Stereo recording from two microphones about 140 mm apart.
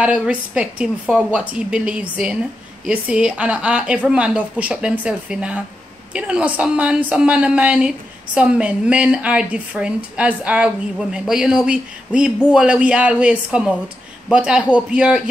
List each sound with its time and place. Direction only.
0.0 s a woman's voice: 5° right (ahead or behind)